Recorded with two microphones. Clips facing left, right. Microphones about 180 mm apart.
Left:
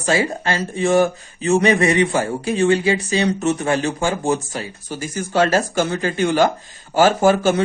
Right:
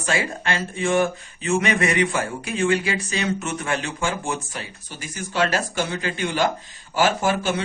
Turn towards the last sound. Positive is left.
turn(degrees=45)  # may be behind; listen again after turning